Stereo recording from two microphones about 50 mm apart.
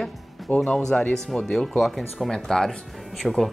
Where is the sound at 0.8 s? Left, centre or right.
Centre.